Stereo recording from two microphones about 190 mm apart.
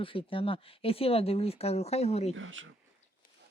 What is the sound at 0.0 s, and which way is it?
Speech, 30° left (ahead or behind).